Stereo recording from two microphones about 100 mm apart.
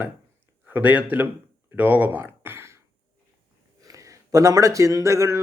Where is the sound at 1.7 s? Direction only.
15° right (ahead or behind).